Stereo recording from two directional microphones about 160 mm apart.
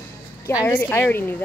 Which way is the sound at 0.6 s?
15° left (ahead or behind).